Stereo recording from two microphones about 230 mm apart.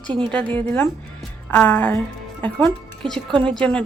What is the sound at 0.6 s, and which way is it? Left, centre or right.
A woman's voice, centre.